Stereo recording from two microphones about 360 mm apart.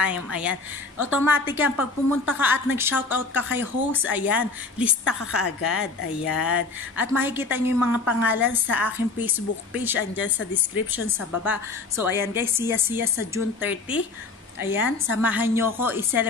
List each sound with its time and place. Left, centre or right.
0.0 s a woman's voice: centre
7.0 s a woman's voice: centre
10.2 s a woman's voice: left
10.9 s a woman's voice: centre